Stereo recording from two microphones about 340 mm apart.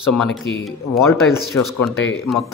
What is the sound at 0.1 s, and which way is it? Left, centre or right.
A man's voice, centre.